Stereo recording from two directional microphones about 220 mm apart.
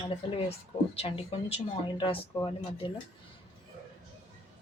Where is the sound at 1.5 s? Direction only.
20° left (ahead or behind).